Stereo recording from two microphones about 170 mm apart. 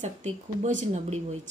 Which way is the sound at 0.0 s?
45° right (ahead or behind).